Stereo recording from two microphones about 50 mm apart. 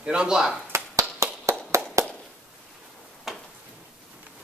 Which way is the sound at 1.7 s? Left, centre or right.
Right.